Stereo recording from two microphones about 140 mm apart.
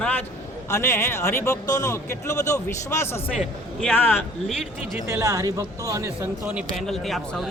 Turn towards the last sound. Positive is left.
turn(degrees=0)  # may be behind; listen again after turning